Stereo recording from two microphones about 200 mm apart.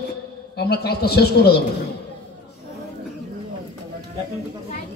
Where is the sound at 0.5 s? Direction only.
55° left (ahead or behind).